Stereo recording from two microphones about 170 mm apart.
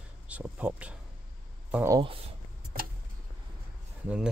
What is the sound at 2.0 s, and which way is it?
Speech, 30° right (ahead or behind).